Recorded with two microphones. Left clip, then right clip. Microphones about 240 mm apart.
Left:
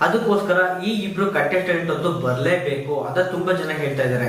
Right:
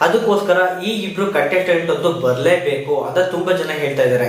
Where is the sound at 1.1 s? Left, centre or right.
Centre.